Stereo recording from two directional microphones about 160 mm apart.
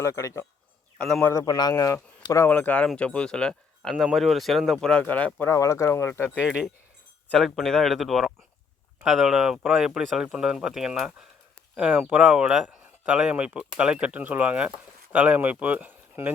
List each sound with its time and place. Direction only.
0.0 s speech: 20° left (ahead or behind)
0.9 s a man's voice: centre (ahead or behind)
1.2 s speech: 20° left (ahead or behind)
6.4 s speech: 5° right (ahead or behind)